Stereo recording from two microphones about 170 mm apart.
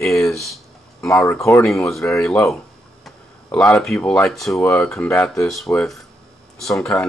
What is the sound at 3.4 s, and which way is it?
Speech, 10° left (ahead or behind).